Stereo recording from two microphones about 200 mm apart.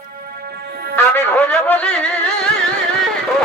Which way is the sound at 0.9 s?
10° left (ahead or behind).